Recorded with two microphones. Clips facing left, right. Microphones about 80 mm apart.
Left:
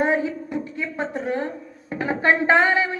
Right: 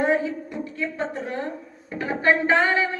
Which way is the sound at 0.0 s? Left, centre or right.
Left.